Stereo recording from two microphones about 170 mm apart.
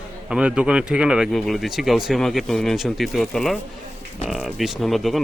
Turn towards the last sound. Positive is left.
turn(degrees=0)  # may be behind; listen again after turning